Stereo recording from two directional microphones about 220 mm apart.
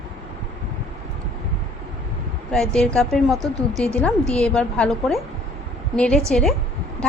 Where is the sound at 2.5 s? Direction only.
5° left (ahead or behind).